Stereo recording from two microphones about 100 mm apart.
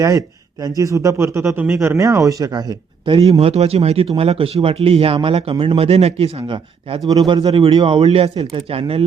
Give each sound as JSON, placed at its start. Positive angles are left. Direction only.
{"t": 0.0, "sound": "speech", "side_deg": -35}
{"t": 2.0, "sound": "speech", "side_deg": -35}
{"t": 3.1, "sound": "speech", "side_deg": -90}
{"t": 7.1, "sound": "speech", "side_deg": -45}